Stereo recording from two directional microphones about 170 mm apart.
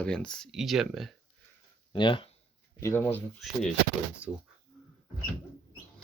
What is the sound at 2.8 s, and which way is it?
Speech, 15° left (ahead or behind).